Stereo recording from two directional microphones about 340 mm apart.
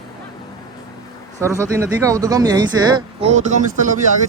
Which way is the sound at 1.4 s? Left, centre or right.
Centre.